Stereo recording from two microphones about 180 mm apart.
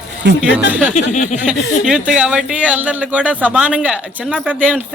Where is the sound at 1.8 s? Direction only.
5° right (ahead or behind).